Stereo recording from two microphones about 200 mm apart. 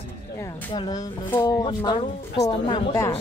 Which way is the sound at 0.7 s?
20° left (ahead or behind).